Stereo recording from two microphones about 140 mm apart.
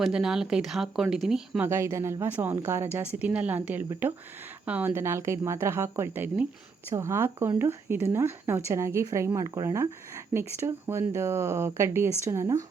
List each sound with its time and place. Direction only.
0.0 s speech: 5° right (ahead or behind)
1.6 s a woman's voice: 20° right (ahead or behind)